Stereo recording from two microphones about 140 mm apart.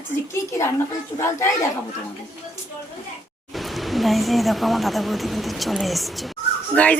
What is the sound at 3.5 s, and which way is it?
Speech, centre (ahead or behind).